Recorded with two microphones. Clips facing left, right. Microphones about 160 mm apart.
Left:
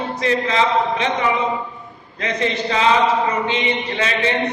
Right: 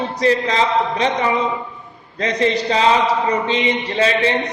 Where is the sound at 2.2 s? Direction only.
35° right (ahead or behind).